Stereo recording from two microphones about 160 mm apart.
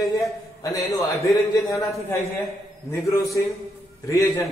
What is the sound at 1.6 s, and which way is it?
Speech, 20° left (ahead or behind).